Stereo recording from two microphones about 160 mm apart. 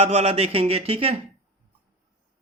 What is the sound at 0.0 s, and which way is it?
Speech, 40° right (ahead or behind).